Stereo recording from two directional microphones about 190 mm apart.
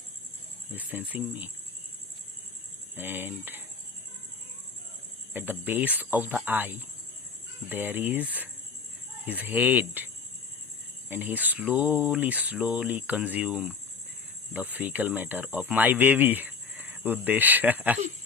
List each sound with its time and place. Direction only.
0.7 s speech: 10° right (ahead or behind)
2.9 s speech: 10° right (ahead or behind)
5.3 s speech: 10° right (ahead or behind)
11.1 s speech: 10° right (ahead or behind)